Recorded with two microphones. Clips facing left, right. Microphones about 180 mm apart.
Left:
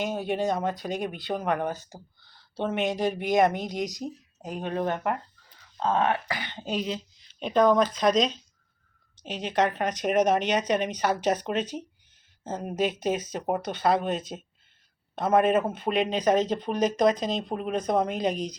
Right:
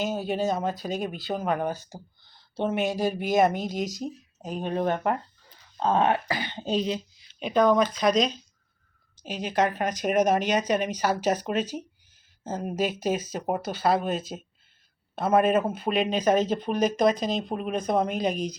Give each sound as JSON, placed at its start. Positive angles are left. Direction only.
{"t": 0.3, "sound": "speech", "side_deg": -5}
{"t": 3.7, "sound": "speech", "side_deg": 20}
{"t": 4.6, "sound": "speech", "side_deg": -15}
{"t": 5.8, "sound": "speech", "side_deg": -30}
{"t": 7.3, "sound": "speech", "side_deg": -5}
{"t": 16.0, "sound": "speech", "side_deg": 20}
{"t": 16.5, "sound": "speech", "side_deg": -5}
{"t": 16.8, "sound": "speech", "side_deg": 20}
{"t": 17.3, "sound": "speech", "side_deg": -10}
{"t": 18.0, "sound": "speech", "side_deg": 20}